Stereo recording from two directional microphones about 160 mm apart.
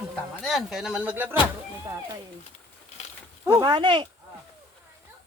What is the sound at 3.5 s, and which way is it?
Speech, 30° right (ahead or behind).